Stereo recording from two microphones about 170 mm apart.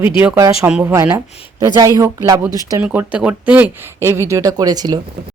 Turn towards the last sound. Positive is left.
turn(degrees=-25)  # may be behind; listen again after turning